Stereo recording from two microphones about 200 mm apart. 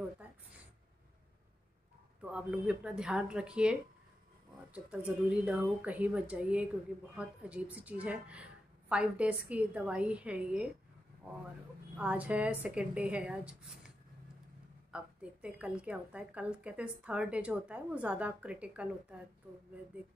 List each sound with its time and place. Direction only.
0.2 s a sound: 5° right (ahead or behind)
2.2 s a woman's voice: 5° right (ahead or behind)
4.7 s a woman's voice: 5° right (ahead or behind)
12.0 s speech: 5° right (ahead or behind)
14.9 s a woman's voice: 5° right (ahead or behind)